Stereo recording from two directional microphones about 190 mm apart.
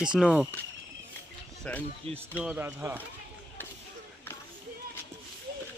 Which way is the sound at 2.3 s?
5° right (ahead or behind).